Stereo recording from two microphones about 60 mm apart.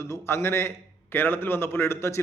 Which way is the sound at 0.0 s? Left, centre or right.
Left.